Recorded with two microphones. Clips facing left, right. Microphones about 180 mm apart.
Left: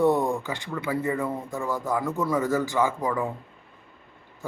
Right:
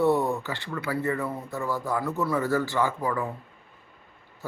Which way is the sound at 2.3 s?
10° left (ahead or behind).